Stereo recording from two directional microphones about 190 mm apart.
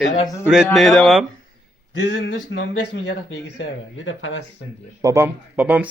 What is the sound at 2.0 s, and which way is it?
Speech, 70° left (ahead or behind).